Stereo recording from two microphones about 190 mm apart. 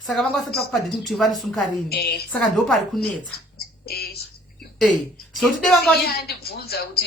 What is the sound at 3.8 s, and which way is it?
Speech, 55° left (ahead or behind).